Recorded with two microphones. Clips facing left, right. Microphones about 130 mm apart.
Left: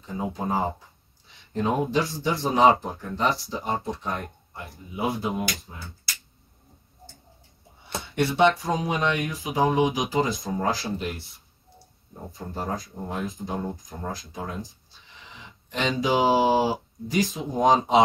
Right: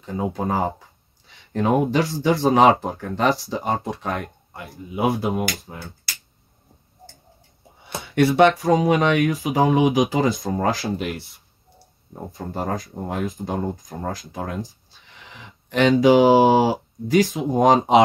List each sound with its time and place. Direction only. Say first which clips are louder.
0.0 s speech: right 5 dB; 60° right (ahead or behind)
8.0 s speech: right 5 dB; 55° right (ahead or behind)
12.3 s speech: right 4 dB; 60° right (ahead or behind)